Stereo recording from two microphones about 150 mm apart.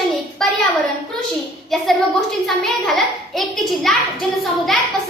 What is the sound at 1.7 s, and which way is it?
Speech, centre (ahead or behind).